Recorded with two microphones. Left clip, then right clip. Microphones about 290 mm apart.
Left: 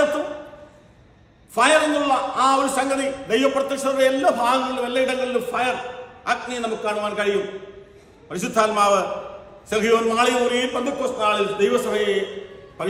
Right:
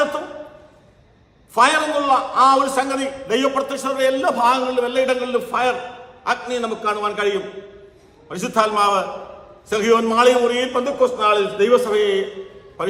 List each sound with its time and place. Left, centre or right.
1.5 s a man's voice: centre